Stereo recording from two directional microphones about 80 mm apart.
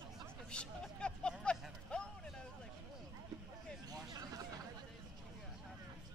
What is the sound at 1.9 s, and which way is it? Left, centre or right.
Vehicle, centre.